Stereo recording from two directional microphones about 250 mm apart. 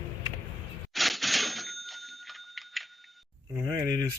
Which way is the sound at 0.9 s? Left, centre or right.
Centre.